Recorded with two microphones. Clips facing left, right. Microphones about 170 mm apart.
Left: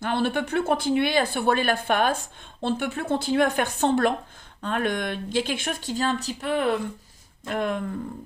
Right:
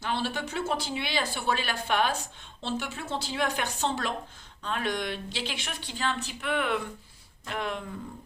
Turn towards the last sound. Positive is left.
turn(degrees=50)  # may be behind; listen again after turning